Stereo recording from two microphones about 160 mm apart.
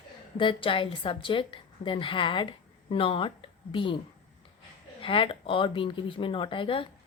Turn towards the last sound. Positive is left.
turn(degrees=35)  # may be behind; listen again after turning